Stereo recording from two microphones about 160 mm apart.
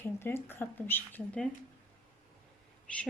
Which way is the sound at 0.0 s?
15° left (ahead or behind).